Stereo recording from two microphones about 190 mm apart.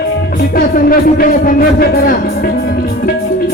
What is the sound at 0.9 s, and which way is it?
Music, 50° left (ahead or behind).